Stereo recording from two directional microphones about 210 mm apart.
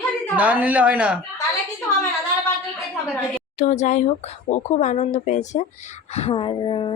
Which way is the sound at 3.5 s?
35° left (ahead or behind).